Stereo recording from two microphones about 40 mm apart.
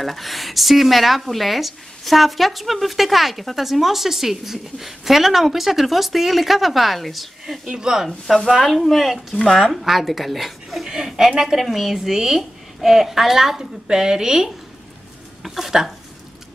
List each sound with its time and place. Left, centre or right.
0.0 s speech: centre
7.6 s speech: centre
8.5 s a woman's voice: centre